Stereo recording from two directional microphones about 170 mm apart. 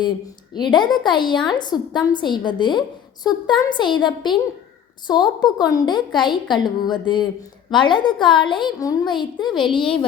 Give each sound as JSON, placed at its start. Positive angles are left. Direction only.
{"t": 0.5, "sound": "a woman's voice", "side_deg": 25}